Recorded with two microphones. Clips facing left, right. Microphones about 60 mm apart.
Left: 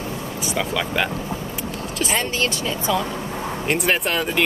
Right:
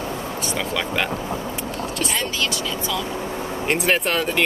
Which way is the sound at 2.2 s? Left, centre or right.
Left.